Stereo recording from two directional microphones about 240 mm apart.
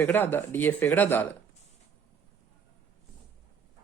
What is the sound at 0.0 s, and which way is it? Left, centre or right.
Speech, centre.